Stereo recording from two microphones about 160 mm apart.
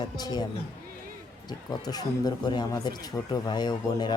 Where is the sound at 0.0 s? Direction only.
25° left (ahead or behind).